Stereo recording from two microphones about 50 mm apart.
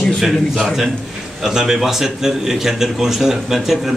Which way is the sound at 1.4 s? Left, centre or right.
Centre.